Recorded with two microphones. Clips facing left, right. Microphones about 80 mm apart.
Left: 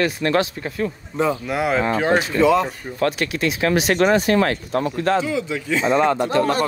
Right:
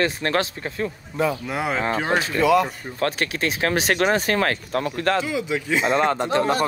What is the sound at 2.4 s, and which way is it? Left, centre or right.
Speech, left.